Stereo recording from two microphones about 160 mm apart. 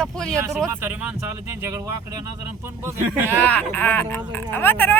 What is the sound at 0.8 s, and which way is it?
Speech, 10° right (ahead or behind).